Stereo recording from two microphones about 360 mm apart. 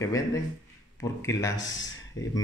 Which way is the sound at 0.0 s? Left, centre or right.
Centre.